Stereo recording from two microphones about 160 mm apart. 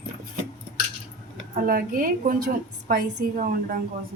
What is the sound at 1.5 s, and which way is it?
A woman's voice, 60° right (ahead or behind).